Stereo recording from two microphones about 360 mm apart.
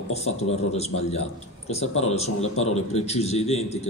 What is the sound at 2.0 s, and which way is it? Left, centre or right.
Speech, centre.